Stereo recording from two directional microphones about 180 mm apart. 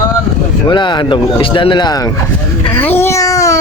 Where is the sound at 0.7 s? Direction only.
25° left (ahead or behind).